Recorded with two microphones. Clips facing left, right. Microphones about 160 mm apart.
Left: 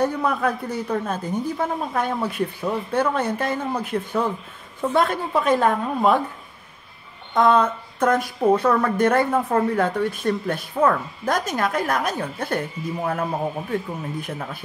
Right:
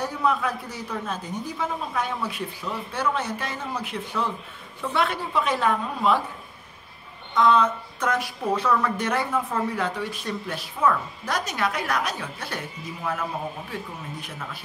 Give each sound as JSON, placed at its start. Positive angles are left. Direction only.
{"t": 0.0, "sound": "speech", "side_deg": 55}
{"t": 7.3, "sound": "speech", "side_deg": 50}